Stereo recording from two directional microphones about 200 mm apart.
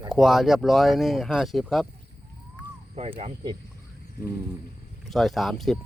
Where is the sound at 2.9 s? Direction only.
30° right (ahead or behind).